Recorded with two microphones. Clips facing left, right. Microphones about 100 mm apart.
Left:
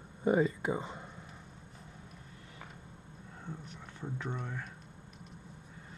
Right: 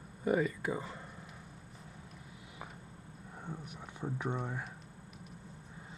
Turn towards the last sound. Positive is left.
turn(degrees=-10)  # may be behind; listen again after turning